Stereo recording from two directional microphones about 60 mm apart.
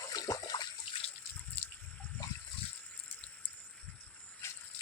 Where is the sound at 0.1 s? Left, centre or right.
Left.